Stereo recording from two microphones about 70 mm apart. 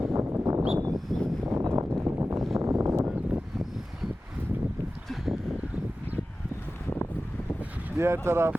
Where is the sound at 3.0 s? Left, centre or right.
Right.